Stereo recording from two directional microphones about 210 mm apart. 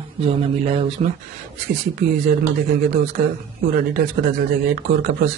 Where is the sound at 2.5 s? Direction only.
40° right (ahead or behind).